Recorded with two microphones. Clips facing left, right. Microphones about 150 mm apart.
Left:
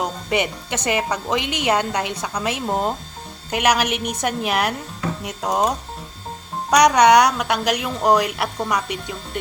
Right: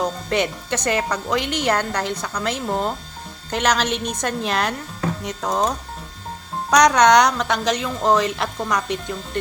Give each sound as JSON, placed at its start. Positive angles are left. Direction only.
{"t": 0.0, "sound": "speech", "side_deg": 15}